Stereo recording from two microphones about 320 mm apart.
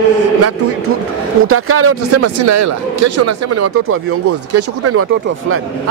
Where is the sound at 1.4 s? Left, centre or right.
Right.